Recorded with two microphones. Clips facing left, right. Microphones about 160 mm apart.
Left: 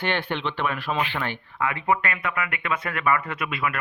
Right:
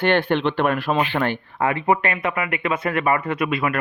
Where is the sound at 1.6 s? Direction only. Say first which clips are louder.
Right 4 dB; 30° right (ahead or behind).